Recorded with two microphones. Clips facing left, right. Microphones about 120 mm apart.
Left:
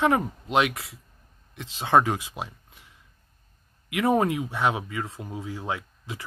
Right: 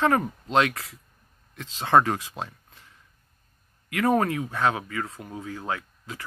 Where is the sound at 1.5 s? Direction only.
15° left (ahead or behind).